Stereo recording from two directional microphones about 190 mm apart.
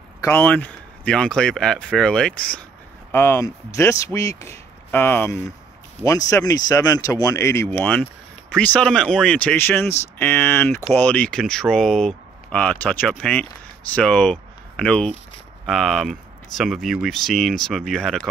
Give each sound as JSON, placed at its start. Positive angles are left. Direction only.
{"t": 0.2, "sound": "speech", "side_deg": 10}